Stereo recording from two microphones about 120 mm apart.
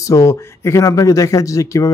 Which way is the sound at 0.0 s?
25° left (ahead or behind).